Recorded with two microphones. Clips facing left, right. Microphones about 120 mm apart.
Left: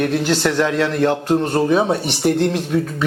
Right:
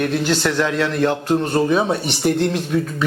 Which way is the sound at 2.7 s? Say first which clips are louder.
Left 1 dB; 40° left (ahead or behind).